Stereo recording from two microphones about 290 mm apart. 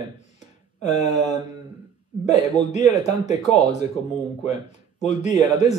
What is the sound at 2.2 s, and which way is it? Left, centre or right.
Speech, left.